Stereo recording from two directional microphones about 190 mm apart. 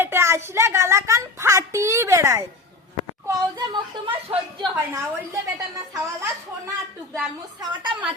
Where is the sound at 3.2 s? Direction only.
20° right (ahead or behind).